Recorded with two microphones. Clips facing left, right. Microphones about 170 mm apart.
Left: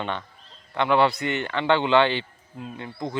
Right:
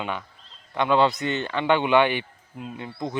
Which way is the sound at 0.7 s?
20° right (ahead or behind).